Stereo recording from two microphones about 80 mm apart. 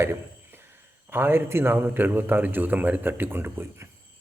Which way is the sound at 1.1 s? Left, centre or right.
Right.